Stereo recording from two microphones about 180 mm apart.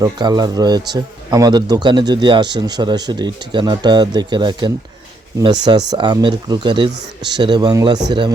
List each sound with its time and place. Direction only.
0.0 s speech: 25° right (ahead or behind)